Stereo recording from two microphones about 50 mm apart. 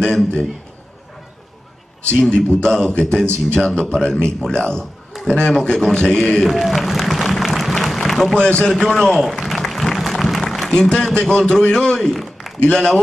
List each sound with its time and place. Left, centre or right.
0.0 s a man's voice: centre
2.0 s a man's voice: left
5.1 s a sound: centre
5.5 s a man's voice: centre
6.4 s a sound: centre
8.4 s a man's voice: centre
8.7 s applause: centre
10.7 s a man's voice: centre
12.5 s a man's voice: centre